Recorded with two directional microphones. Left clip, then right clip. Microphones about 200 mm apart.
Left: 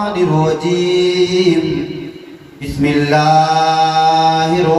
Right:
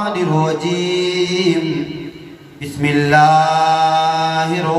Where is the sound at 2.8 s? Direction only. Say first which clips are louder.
Right 1 dB; 40° right (ahead or behind).